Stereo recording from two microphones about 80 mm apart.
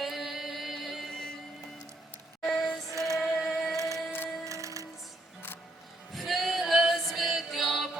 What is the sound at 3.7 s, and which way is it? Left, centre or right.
Music, right.